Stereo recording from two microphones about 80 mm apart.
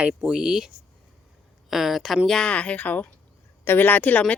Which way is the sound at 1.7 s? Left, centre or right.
Centre.